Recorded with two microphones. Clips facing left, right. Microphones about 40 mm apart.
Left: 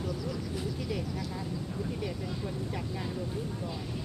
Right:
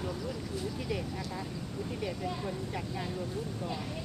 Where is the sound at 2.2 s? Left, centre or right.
Centre.